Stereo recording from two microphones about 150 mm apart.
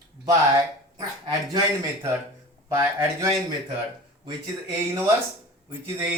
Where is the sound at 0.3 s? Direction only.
25° right (ahead or behind).